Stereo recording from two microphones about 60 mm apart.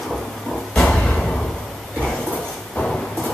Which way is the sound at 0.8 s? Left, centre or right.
Centre.